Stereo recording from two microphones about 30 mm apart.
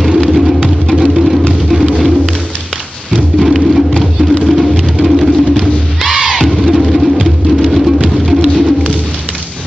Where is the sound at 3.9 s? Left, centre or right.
Centre.